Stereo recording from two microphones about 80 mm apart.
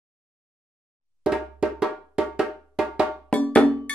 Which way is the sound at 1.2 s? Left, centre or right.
Centre.